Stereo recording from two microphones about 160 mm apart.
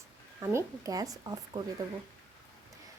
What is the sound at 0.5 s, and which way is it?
Speech, 20° right (ahead or behind).